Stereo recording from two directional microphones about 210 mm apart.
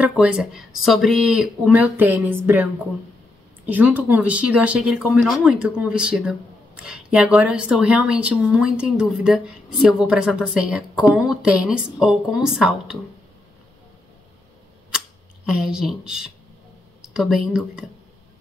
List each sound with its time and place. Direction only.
0.0 s speech: 5° right (ahead or behind)
15.4 s speech: centre (ahead or behind)